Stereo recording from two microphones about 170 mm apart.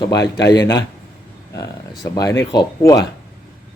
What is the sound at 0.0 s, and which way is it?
Speech, 20° left (ahead or behind).